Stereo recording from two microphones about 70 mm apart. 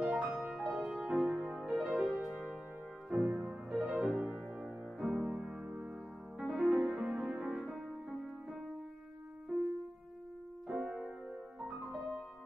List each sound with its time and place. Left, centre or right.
0.0 s music: centre
10.7 s music: centre